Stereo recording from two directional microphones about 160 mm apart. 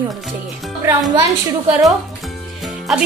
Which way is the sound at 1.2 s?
20° right (ahead or behind).